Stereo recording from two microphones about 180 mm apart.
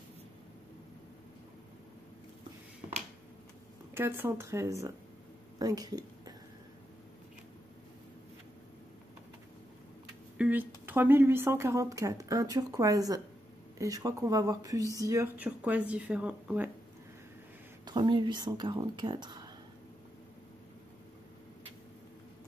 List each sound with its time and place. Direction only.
3.9 s a woman's voice: 10° right (ahead or behind)
10.3 s speech: 10° right (ahead or behind)
17.8 s speech: 25° right (ahead or behind)